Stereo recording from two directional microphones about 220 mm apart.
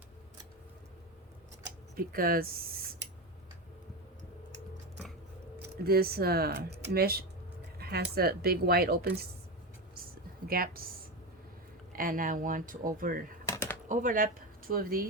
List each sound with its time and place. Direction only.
2.0 s speech: 40° right (ahead or behind)
5.8 s speech: 45° right (ahead or behind)
7.8 s a sound: 45° right (ahead or behind)
8.1 s speech: 45° right (ahead or behind)
10.5 s speech: 40° right (ahead or behind)
11.9 s speech: 40° right (ahead or behind)
13.5 s typing: 10° left (ahead or behind)
13.8 s speech: 35° right (ahead or behind)